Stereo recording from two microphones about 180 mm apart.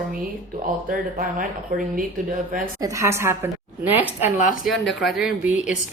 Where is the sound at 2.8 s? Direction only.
15° right (ahead or behind).